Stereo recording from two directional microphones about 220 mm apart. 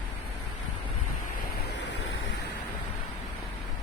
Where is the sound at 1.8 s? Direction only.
50° left (ahead or behind).